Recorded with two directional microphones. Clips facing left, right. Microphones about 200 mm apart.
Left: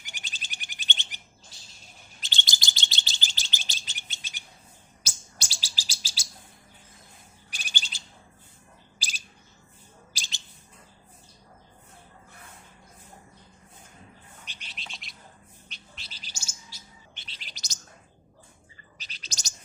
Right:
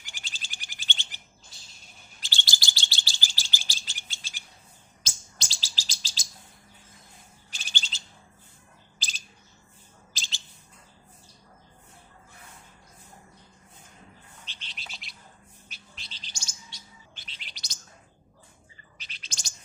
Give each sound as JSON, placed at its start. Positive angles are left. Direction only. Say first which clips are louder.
{"t": 0.0, "sound": "bird", "louder": "left 1 dB", "side_deg": 20}
{"t": 2.2, "sound": "chirp", "louder": "even", "side_deg": 20}
{"t": 7.5, "sound": "bird", "louder": "even", "side_deg": 15}
{"t": 10.1, "sound": "bird", "louder": "right 2 dB", "side_deg": 15}
{"t": 14.4, "sound": "bird", "louder": "left 1 dB", "side_deg": 15}
{"t": 14.8, "sound": "bird", "louder": "left 1 dB", "side_deg": 0}
{"t": 17.2, "sound": "chirp", "louder": "left 1 dB", "side_deg": 40}
{"t": 18.9, "sound": "bird", "louder": "left 2 dB", "side_deg": 40}